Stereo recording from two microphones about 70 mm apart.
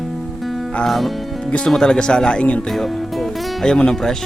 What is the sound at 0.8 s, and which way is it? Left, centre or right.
Speech, centre.